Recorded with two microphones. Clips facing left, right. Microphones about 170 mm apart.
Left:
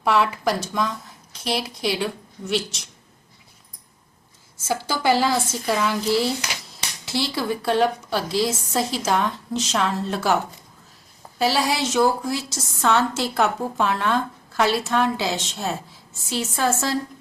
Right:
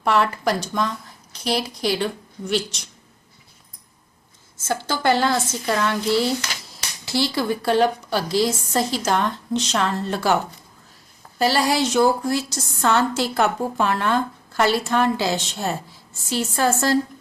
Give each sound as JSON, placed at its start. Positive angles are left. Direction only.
{"t": 0.0, "sound": "a woman's voice", "side_deg": 5}
{"t": 4.5, "sound": "a woman's voice", "side_deg": 10}